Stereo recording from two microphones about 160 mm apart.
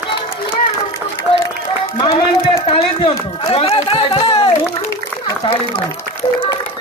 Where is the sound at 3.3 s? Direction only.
35° left (ahead or behind).